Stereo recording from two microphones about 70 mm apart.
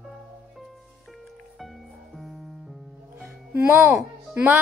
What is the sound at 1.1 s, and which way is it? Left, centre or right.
Music, centre.